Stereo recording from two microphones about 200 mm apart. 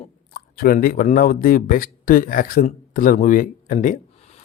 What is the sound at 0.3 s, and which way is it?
Speech, 45° left (ahead or behind).